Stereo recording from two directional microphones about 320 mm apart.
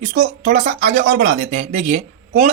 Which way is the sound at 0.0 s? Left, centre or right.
Right.